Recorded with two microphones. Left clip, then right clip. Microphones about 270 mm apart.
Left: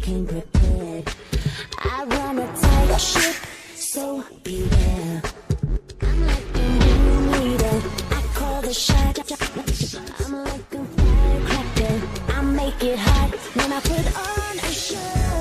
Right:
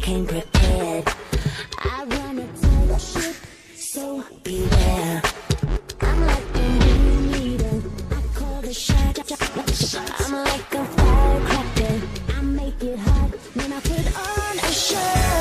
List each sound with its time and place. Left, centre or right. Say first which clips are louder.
0.0 s music: right 4 dB; right
0.5 s music: right 6 dB; right
1.8 s a sound: left 3 dB; centre
2.6 s music: left 8 dB; left
4.5 s music: right 4 dB; centre
6.6 s music: left 2 dB; centre
10.1 s music: right 6 dB; right
11.1 s music: right 3 dB; centre
12.3 s music: left 5 dB; centre
12.6 s music: left 6 dB; left
13.6 s music: left 4 dB; centre; by 15.3 s right